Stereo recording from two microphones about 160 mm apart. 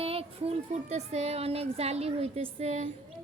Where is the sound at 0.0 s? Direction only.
40° right (ahead or behind).